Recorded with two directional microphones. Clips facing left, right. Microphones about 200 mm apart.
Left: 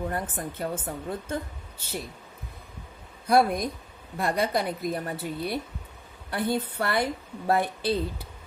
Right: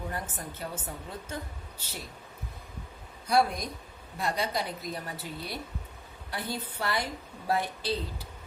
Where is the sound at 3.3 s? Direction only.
55° left (ahead or behind).